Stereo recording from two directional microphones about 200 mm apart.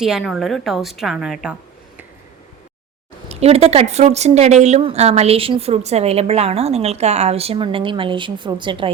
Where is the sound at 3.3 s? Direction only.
30° right (ahead or behind).